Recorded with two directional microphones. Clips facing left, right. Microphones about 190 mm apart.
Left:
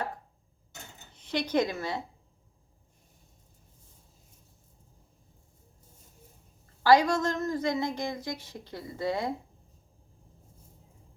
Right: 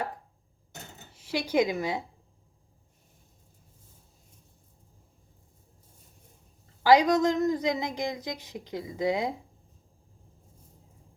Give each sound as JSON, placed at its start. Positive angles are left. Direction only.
{"t": 1.1, "sound": "speech", "side_deg": -5}
{"t": 6.8, "sound": "speech", "side_deg": -15}